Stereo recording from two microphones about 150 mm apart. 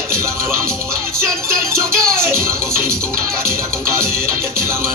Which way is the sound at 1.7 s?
15° right (ahead or behind).